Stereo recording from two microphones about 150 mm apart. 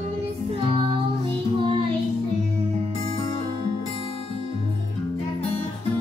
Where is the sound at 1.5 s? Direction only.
35° right (ahead or behind).